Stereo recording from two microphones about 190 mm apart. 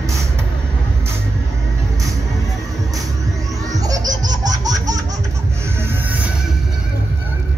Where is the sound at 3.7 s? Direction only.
20° right (ahead or behind).